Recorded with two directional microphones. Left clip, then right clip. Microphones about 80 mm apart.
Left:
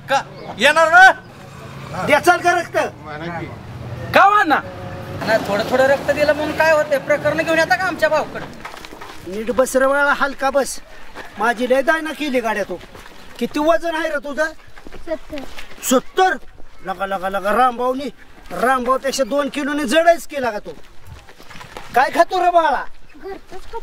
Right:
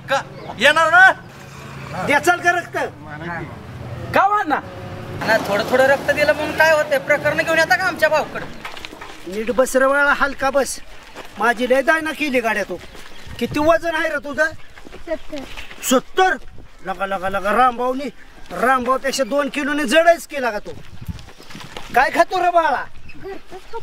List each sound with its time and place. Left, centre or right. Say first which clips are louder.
0.0 s a man's voice: left 2 dB; centre
1.8 s vehicle: left 1 dB; centre
2.0 s a man's voice: left 2 dB; left
4.1 s a man's voice: left 4 dB; left
5.5 s speech: even; centre
9.4 s speech: even; centre
21.7 s speech: left 1 dB; centre